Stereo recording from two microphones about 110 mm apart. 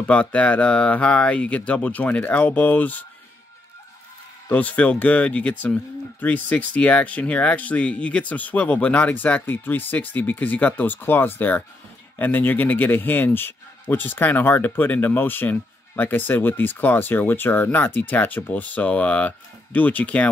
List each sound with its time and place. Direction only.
0.0 s speech: 15° left (ahead or behind)
4.5 s speech: 15° left (ahead or behind)